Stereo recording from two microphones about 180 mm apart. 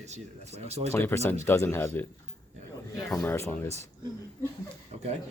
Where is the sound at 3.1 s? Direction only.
10° left (ahead or behind).